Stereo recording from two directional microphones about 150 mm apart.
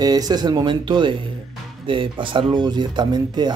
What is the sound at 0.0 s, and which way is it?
Speech, 25° right (ahead or behind).